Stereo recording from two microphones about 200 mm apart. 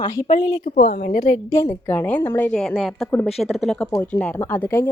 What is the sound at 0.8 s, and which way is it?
Speech, 50° left (ahead or behind).